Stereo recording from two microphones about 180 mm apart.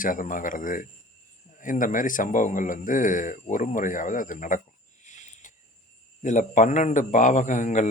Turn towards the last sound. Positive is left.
turn(degrees=45)  # may be behind; listen again after turning